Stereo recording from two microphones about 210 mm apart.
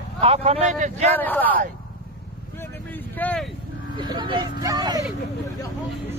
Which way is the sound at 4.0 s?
20° right (ahead or behind).